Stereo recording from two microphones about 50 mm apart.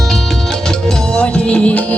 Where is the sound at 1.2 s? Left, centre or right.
Left.